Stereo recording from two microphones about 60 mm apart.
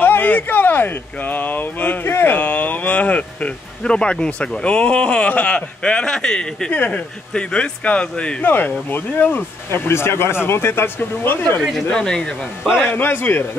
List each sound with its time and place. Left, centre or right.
0.0 s speech: left; by 6.7 s centre
6.7 s speech: left
8.5 s speech: left
11.9 s speech: centre
12.6 s a man's voice: centre
12.9 s speech: left